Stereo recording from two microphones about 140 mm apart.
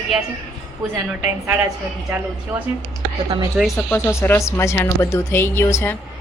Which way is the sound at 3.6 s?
Centre (ahead or behind).